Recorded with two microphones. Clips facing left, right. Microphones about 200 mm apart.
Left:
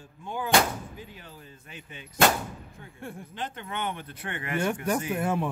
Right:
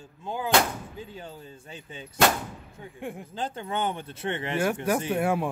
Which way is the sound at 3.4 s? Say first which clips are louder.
Right 5 dB; 30° right (ahead or behind).